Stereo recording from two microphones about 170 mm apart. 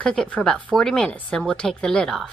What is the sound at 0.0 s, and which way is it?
A woman's voice, 5° left (ahead or behind).